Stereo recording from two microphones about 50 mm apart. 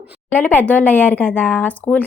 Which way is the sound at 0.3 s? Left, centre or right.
Left.